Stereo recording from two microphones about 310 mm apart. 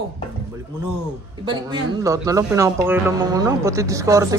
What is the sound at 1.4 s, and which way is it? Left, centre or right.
Speech, centre.